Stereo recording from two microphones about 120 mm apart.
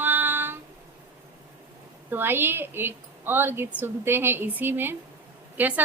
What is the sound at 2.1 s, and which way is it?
A woman's voice, 20° right (ahead or behind).